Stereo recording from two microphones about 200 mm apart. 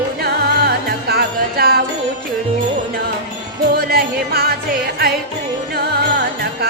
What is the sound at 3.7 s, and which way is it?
Music, 50° right (ahead or behind).